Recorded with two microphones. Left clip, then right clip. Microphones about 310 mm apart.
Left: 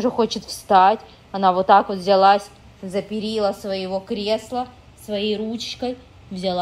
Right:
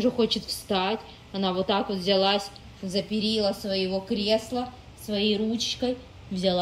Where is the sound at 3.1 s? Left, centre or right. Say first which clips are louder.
Left 2 dB; centre.